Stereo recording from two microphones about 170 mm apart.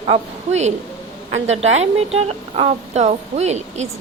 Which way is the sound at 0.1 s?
40° right (ahead or behind).